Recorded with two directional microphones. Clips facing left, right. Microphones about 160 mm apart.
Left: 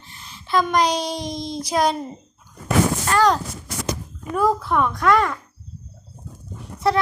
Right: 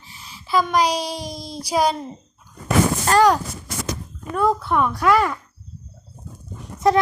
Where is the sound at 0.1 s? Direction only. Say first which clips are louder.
Even; 5° right (ahead or behind).